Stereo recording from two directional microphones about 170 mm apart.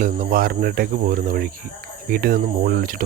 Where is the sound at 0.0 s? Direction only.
55° right (ahead or behind).